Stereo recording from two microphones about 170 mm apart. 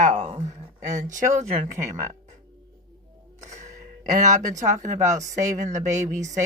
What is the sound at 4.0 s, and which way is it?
Speech, 50° right (ahead or behind).